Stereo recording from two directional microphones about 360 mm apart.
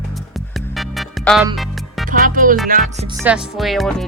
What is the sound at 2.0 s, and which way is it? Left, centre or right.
Music, right.